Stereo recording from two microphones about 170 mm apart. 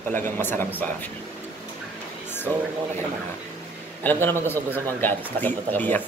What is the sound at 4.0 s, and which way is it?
A man's voice, 10° left (ahead or behind).